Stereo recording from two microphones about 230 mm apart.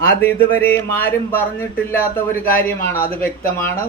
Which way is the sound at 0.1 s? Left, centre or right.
Centre.